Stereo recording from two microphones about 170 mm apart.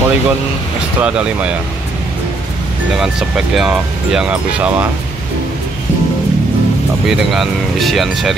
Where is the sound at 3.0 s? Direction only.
5° right (ahead or behind).